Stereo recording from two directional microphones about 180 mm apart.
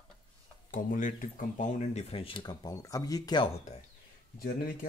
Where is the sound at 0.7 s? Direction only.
50° left (ahead or behind); by 3.5 s 25° left (ahead or behind).